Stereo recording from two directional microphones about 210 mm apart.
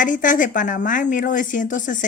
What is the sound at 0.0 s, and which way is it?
Speech, 40° left (ahead or behind).